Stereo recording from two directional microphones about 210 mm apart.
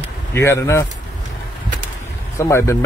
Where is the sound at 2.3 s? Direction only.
15° left (ahead or behind).